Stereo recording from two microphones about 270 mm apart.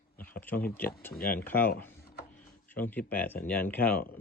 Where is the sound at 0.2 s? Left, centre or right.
Centre.